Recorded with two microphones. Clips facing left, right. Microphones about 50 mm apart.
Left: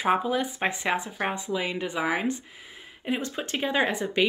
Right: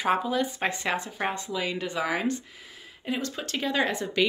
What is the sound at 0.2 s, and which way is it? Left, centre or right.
Speech, centre.